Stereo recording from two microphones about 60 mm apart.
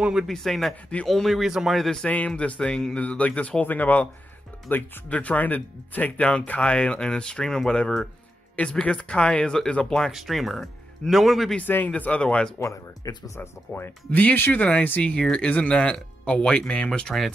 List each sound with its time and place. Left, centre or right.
0.3 s speech: centre
1.8 s speech: centre
2.0 s speech: left
5.1 s speech: left; by 10.1 s centre
10.1 s speech: centre
11.6 s speech: left
11.9 s speech: left
12.5 s speech: left
13.4 s speech: left
14.1 s speech: left